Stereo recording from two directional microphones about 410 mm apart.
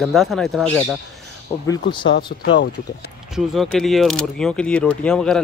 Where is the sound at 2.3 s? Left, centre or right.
Left.